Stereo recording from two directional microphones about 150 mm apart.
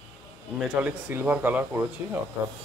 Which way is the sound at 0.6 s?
10° right (ahead or behind).